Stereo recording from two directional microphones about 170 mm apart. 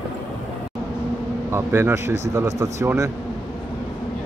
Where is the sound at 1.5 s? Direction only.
15° right (ahead or behind).